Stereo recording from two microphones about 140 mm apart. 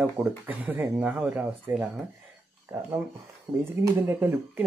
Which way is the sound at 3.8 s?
20° right (ahead or behind).